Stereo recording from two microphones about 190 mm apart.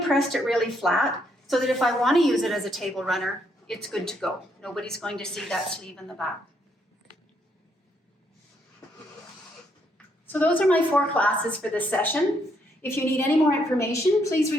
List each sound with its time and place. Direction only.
0.1 s a woman's voice: centre (ahead or behind)
10.3 s a woman's voice: 5° left (ahead or behind)